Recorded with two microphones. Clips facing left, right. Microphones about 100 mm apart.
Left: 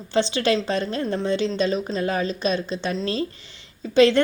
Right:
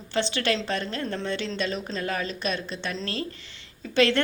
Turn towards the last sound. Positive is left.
turn(degrees=20)  # may be behind; listen again after turning